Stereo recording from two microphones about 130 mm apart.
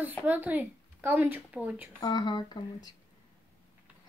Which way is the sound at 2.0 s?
35° left (ahead or behind).